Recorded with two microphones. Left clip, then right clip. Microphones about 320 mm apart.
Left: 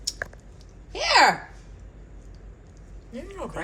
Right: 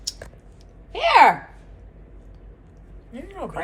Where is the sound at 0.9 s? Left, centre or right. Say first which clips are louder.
Right 4 dB; right.